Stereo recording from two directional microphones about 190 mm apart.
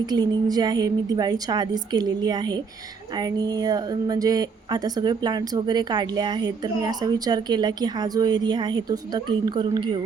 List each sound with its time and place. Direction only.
0.0 s speech: 20° right (ahead or behind)